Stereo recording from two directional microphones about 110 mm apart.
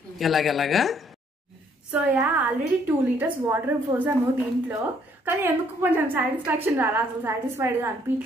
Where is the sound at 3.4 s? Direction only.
20° right (ahead or behind).